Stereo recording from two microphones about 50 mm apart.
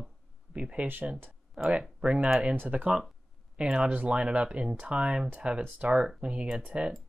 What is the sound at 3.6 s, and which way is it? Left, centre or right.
Speech, centre.